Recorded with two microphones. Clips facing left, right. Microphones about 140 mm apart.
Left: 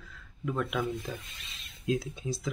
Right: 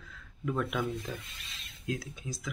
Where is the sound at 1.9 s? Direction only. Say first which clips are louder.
Left 6 dB; 25° left (ahead or behind).